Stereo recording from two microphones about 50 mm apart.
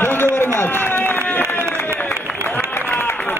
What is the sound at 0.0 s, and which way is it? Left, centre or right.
Run, left.